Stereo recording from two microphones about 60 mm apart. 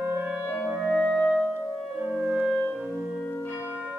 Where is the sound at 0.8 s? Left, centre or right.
Centre.